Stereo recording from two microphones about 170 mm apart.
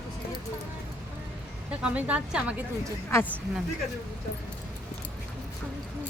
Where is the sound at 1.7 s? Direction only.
5° right (ahead or behind).